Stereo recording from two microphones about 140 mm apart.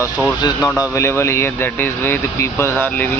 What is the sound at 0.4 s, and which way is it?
Speech, 25° left (ahead or behind).